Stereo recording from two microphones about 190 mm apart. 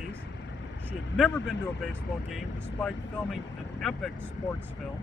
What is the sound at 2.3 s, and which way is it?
Speech, 5° left (ahead or behind).